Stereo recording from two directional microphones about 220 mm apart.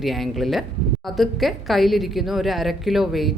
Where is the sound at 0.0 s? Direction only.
Centre (ahead or behind).